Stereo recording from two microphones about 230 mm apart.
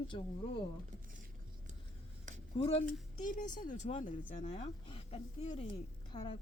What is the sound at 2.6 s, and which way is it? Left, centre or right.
Speech, left.